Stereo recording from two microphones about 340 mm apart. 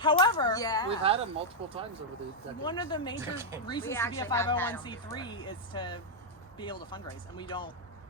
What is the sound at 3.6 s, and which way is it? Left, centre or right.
Speech, centre.